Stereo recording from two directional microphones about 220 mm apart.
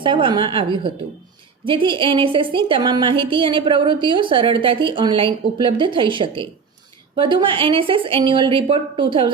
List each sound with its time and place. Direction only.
0.0 s a woman's voice: 20° right (ahead or behind)